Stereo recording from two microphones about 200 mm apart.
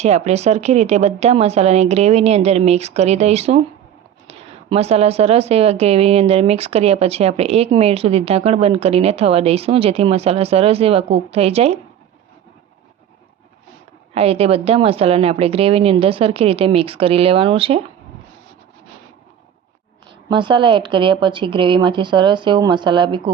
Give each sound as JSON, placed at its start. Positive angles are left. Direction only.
{"t": 0.0, "sound": "a woman's voice", "side_deg": -35}
{"t": 14.1, "sound": "a woman's voice", "side_deg": -30}
{"t": 20.3, "sound": "a woman's voice", "side_deg": -25}